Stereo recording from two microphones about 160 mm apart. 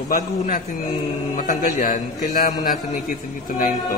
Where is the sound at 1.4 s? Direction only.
65° left (ahead or behind).